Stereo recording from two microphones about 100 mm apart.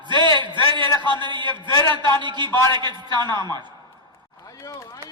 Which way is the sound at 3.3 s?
35° left (ahead or behind).